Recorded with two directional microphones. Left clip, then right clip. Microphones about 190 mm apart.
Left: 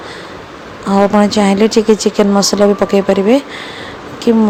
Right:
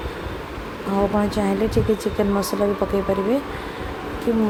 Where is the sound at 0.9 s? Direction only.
30° left (ahead or behind).